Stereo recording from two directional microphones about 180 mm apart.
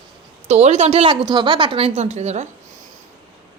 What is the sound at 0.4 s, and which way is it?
A woman's voice, 40° right (ahead or behind).